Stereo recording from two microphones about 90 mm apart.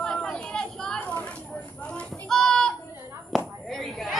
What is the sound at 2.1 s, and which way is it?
Children playing, 5° left (ahead or behind).